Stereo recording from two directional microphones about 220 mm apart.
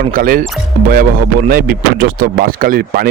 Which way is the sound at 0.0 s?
40° right (ahead or behind).